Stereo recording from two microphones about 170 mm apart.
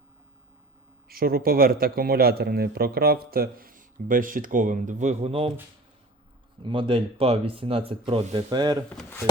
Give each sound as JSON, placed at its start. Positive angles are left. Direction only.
{"t": 1.0, "sound": "a man's voice", "side_deg": -60}
{"t": 6.6, "sound": "speech", "side_deg": -30}
{"t": 8.9, "sound": "speech", "side_deg": 10}